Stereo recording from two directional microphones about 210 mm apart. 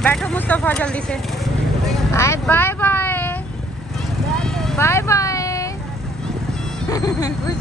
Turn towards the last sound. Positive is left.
turn(degrees=15)  # may be behind; listen again after turning